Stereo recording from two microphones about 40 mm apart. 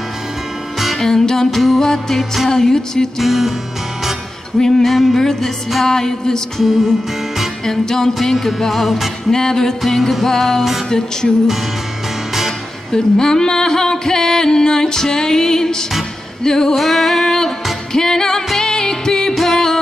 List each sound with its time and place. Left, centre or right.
0.9 s music: centre
1.5 s music: centre
1.8 s music: centre
3.2 s music: centre
4.6 s music: centre
4.8 s music: centre
7.6 s music: centre
9.3 s music: centre
12.9 s music: centre
16.7 s music: centre